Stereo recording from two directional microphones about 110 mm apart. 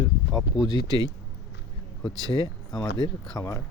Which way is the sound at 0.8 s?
35° right (ahead or behind).